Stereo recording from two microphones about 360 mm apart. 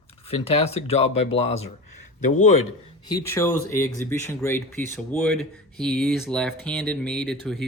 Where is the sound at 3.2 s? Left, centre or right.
Centre.